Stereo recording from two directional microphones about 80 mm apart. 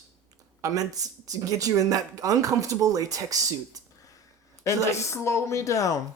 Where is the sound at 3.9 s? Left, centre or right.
Left.